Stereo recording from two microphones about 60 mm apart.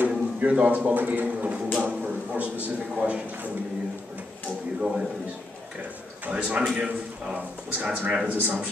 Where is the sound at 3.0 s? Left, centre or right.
Right.